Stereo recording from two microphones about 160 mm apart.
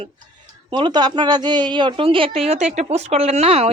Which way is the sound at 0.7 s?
25° right (ahead or behind).